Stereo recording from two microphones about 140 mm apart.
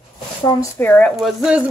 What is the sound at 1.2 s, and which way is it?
Speech, centre (ahead or behind).